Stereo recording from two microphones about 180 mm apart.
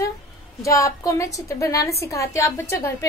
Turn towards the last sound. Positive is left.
turn(degrees=15)  # may be behind; listen again after turning